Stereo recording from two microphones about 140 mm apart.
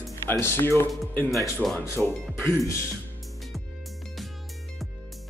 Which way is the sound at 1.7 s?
20° left (ahead or behind).